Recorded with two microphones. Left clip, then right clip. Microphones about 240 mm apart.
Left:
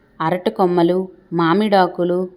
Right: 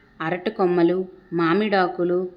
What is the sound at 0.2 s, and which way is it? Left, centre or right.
A woman's voice, centre.